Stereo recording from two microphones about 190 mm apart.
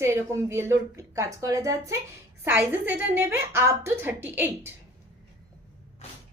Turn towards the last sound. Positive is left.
turn(degrees=-10)  # may be behind; listen again after turning